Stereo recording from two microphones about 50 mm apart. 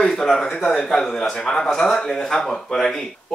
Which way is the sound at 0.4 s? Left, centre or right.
Centre.